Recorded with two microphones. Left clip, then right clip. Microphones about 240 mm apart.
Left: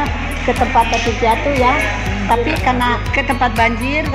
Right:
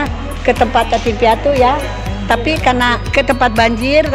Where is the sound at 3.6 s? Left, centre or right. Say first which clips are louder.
Right 4 dB; right.